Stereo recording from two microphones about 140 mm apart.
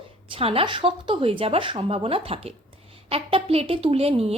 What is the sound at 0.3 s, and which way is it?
A woman's voice, 40° right (ahead or behind).